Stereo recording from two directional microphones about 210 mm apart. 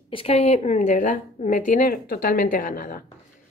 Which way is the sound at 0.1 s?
25° left (ahead or behind).